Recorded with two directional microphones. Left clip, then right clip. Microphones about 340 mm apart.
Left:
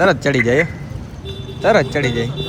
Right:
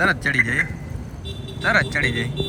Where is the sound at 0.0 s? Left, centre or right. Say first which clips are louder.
Left 4 dB; centre.